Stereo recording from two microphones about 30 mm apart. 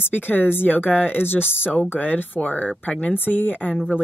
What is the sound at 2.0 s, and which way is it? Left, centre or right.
Speech, left.